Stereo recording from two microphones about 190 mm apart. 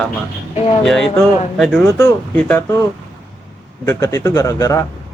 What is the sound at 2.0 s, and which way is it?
Speech, 10° left (ahead or behind).